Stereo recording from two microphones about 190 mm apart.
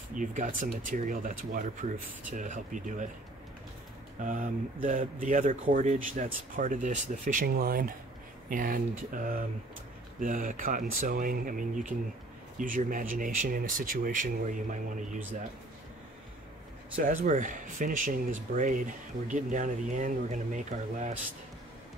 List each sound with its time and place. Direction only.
0.1 s speech: 45° right (ahead or behind)
4.2 s speech: 45° right (ahead or behind)
16.9 s speech: 45° right (ahead or behind)